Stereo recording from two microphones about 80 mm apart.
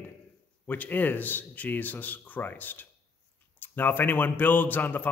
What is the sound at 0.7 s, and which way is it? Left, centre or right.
Speech, left.